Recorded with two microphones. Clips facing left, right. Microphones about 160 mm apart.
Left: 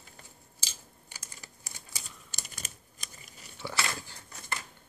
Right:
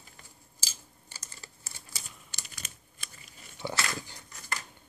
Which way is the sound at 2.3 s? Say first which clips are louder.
Left 3 dB; 45° left (ahead or behind).